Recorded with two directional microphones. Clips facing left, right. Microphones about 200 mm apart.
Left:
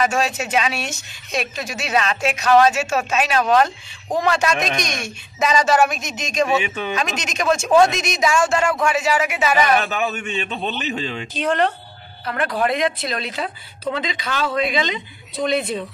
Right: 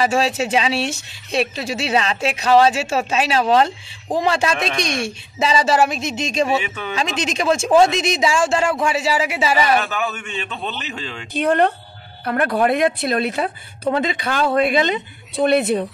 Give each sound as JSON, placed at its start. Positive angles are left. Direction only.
{"t": 0.0, "sound": "speech", "side_deg": -30}
{"t": 9.8, "sound": "a man's voice", "side_deg": 15}
{"t": 11.3, "sound": "speech", "side_deg": -55}